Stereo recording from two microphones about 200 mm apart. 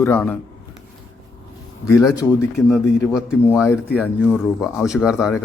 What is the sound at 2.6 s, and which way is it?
A man's voice, 15° left (ahead or behind).